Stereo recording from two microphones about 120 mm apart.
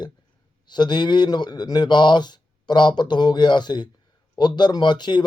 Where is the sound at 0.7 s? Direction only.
40° left (ahead or behind).